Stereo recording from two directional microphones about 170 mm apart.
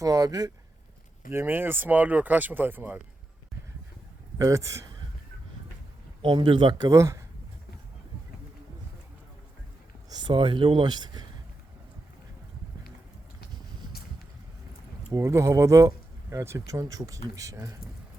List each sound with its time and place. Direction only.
0.0 s speech: 20° right (ahead or behind)
4.4 s a man's voice: 20° right (ahead or behind)
6.2 s speech: 30° right (ahead or behind)
10.1 s speech: 30° right (ahead or behind)
15.1 s speech: 15° right (ahead or behind)